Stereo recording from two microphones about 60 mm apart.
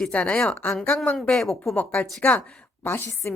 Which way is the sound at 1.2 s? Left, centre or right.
Centre.